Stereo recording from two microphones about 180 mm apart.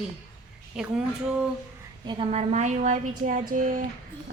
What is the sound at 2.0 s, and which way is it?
A woman's voice, 30° right (ahead or behind).